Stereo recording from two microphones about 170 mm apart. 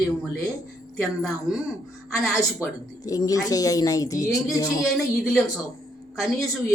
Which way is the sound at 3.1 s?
20° left (ahead or behind).